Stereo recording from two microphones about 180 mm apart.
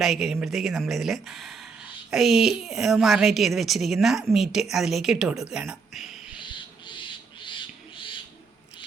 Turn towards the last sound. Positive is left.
turn(degrees=25)  # may be behind; listen again after turning